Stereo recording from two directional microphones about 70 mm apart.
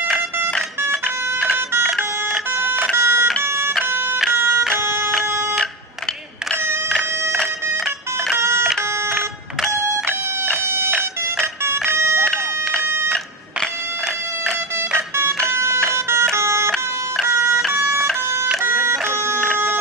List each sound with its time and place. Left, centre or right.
3.0 s telephone: right
3.4 s music: right
7.7 s music: centre
8.4 s music: right
12.0 s a sound: right
15.0 s music: right
18.6 s music: right